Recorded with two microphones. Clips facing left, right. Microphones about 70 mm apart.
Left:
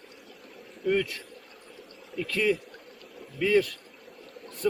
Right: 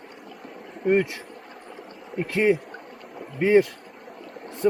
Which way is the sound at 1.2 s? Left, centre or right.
Right.